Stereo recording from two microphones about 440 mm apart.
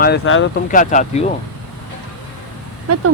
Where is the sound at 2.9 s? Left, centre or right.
Right.